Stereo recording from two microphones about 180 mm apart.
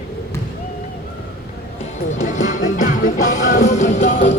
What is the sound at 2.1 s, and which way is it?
Music, 45° left (ahead or behind).